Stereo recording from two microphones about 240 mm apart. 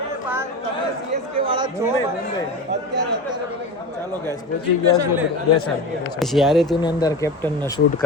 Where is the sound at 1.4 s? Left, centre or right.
Right.